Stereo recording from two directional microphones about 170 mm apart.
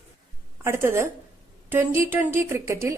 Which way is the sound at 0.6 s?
15° right (ahead or behind).